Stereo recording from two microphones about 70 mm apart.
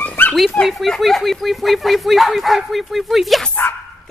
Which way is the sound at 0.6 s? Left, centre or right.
Centre.